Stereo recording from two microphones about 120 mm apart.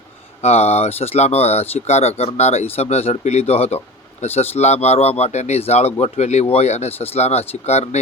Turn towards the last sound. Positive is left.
turn(degrees=65)  # may be behind; listen again after turning